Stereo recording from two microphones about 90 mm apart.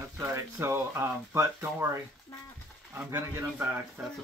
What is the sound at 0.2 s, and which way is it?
Speech, 30° right (ahead or behind).